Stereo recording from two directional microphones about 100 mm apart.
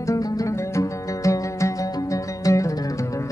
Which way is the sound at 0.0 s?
35° left (ahead or behind).